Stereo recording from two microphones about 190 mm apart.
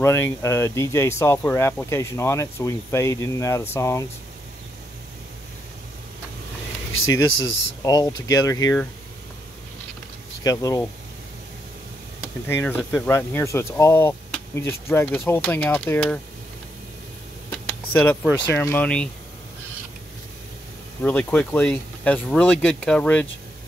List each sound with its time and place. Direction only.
0.0 s speech: 15° left (ahead or behind)
6.9 s speech: 90° left
7.8 s speech: 20° left (ahead or behind)
10.4 s speech: 20° left (ahead or behind)
12.4 s speech: 10° left (ahead or behind)
17.5 s a sound: 10° left (ahead or behind)
18.5 s speech: 10° left (ahead or behind)
21.0 s speech: 10° left (ahead or behind)